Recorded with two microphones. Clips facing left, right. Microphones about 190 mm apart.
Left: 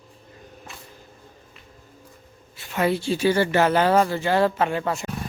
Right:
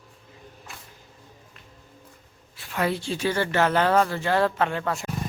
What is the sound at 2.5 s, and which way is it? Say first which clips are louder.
A woman's voice: left 3 dB; centre (ahead or behind).